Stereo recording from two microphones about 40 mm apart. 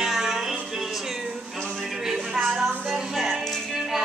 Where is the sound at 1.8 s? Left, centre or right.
Centre.